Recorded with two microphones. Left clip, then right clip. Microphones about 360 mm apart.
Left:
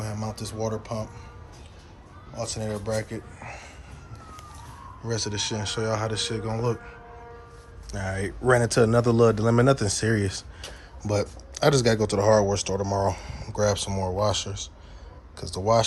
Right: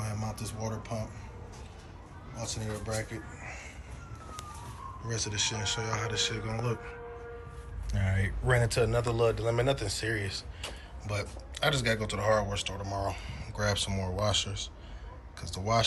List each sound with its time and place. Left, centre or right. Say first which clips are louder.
0.0 s a sound: left 5 dB; centre
0.3 s speech: left 8 dB; centre
2.3 s speech: left 7 dB; centre
5.0 s speech: left 4 dB; centre
7.9 s a man's voice: left 5 dB; left
8.7 s a man's voice: left 8 dB; left
11.1 s speech: left 10 dB; centre